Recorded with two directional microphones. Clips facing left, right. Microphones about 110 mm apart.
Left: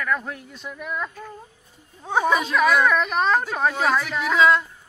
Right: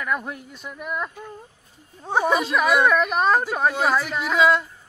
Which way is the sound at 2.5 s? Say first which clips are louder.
Even; 5° right (ahead or behind).